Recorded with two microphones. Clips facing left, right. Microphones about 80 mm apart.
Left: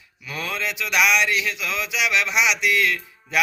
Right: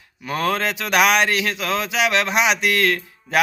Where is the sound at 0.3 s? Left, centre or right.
Right.